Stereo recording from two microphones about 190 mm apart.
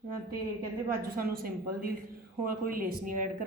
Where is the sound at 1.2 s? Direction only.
50° right (ahead or behind).